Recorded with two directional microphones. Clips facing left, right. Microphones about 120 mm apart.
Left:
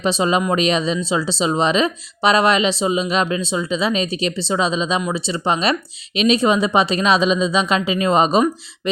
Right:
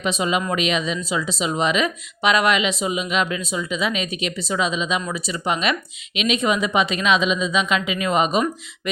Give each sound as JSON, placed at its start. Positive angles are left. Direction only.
{"t": 0.0, "sound": "speech", "side_deg": 30}